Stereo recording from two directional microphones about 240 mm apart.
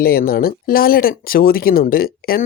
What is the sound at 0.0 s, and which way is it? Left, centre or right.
Speech, left.